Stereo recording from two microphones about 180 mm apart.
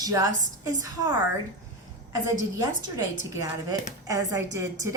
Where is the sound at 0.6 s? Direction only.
20° right (ahead or behind).